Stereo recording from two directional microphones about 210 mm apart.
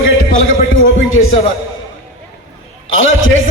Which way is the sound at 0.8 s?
75° left (ahead or behind).